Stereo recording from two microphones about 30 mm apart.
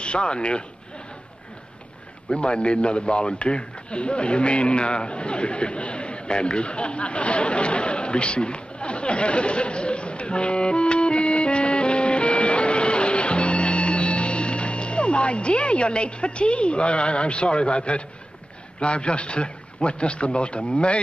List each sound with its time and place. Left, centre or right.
0.0 s a man's voice: left
2.3 s a man's voice: left